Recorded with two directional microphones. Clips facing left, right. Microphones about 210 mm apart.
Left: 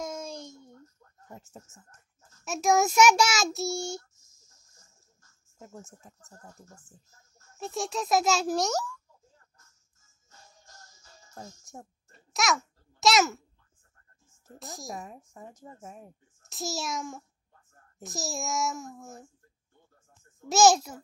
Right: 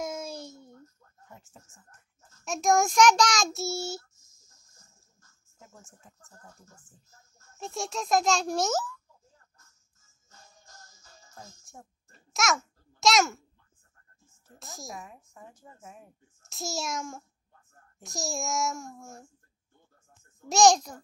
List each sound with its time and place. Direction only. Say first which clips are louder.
0.0 s a sound: right 1 dB; 5° right (ahead or behind)
1.3 s speech: left 6 dB; 40° left (ahead or behind)
2.4 s a child's voice: even; 5° left (ahead or behind)
5.6 s a woman's voice: left 7 dB; 40° left (ahead or behind)
7.5 s a child's voice: left 2 dB; centre (ahead or behind)
11.3 s speech: left 5 dB; 40° left (ahead or behind)
12.1 s babbling: even; centre (ahead or behind)
14.6 s a child's voice: left 3 dB; centre (ahead or behind)
15.0 s a woman's voice: left 3 dB; 40° left (ahead or behind)
16.4 s a child's voice: even; centre (ahead or behind)
20.4 s a child's voice: even; 5° left (ahead or behind)